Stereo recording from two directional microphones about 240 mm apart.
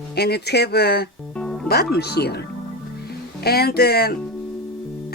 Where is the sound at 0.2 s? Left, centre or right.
Left.